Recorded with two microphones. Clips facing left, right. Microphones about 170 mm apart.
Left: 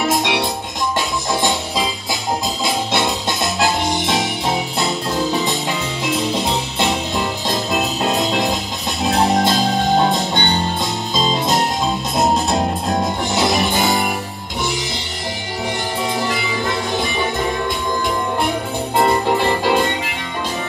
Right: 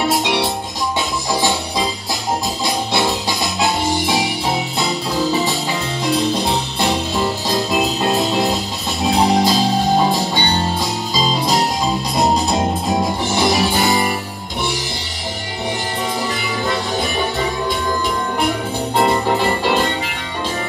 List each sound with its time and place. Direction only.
0.0 s music: centre (ahead or behind)
2.6 s music: centre (ahead or behind)
6.1 s music: 20° left (ahead or behind)
7.4 s music: centre (ahead or behind)